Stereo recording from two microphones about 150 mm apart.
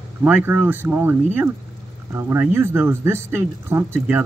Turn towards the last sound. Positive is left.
turn(degrees=-15)  # may be behind; listen again after turning